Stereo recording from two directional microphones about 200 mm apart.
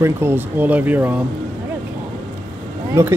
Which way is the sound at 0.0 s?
10° right (ahead or behind).